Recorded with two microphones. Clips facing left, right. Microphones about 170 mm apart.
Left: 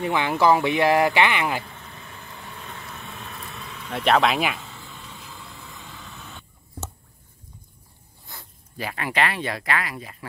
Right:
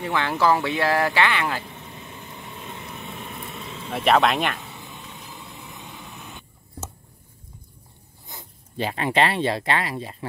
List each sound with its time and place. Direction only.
0.0 s speech: 15° left (ahead or behind)
1.6 s vehicle: 20° right (ahead or behind)
3.9 s speech: centre (ahead or behind)
4.6 s a sound: 20° right (ahead or behind)
8.3 s speech: 20° right (ahead or behind)